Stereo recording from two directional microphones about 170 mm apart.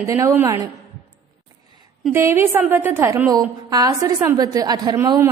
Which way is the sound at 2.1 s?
15° right (ahead or behind).